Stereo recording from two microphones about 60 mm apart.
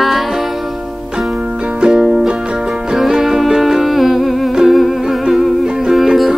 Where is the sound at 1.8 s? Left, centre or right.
Centre.